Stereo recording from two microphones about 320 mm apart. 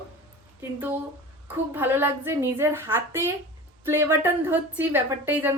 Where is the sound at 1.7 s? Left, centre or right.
Centre.